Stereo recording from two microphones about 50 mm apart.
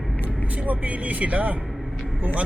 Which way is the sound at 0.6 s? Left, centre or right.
Right.